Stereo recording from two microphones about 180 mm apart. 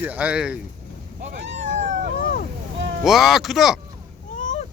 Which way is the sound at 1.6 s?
40° right (ahead or behind).